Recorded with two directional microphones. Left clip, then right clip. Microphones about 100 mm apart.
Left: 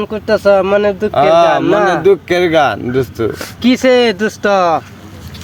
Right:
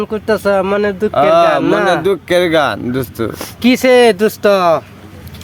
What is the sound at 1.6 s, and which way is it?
Speech, 50° right (ahead or behind).